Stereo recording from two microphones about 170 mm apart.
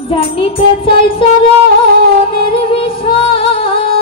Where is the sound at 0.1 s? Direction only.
30° left (ahead or behind).